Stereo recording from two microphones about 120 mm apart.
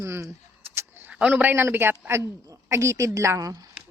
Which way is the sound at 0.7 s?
20° right (ahead or behind).